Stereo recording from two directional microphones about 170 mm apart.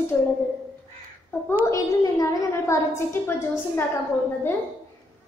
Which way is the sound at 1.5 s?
15° left (ahead or behind).